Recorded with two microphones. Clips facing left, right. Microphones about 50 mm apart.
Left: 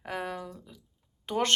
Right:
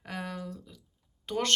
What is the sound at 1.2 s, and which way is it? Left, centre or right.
Speech, centre.